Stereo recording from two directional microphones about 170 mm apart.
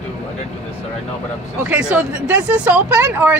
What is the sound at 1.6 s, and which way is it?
Speech, 5° right (ahead or behind).